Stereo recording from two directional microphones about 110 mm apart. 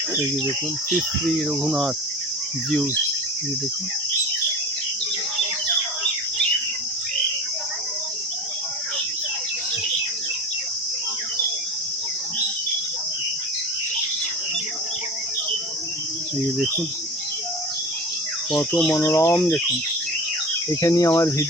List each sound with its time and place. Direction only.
1.4 s speech: centre (ahead or behind)
18.9 s speech: 25° left (ahead or behind)
20.7 s speech: 30° left (ahead or behind)